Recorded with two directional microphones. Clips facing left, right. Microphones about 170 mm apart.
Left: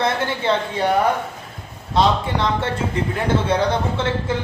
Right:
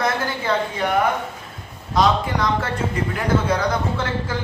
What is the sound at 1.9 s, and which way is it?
A man's voice, 30° left (ahead or behind).